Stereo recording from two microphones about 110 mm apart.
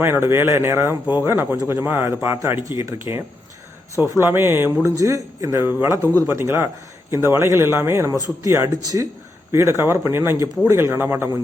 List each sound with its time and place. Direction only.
0.0 s speech: 20° right (ahead or behind)
3.9 s speech: 30° left (ahead or behind)
4.2 s speech: 20° right (ahead or behind)
6.0 s speech: 20° left (ahead or behind)
6.2 s speech: 20° right (ahead or behind)